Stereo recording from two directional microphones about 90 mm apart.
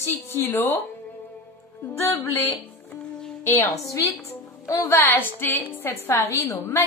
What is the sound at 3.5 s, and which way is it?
Speech, 25° left (ahead or behind).